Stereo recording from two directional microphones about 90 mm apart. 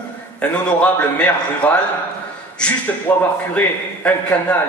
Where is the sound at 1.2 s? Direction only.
15° left (ahead or behind).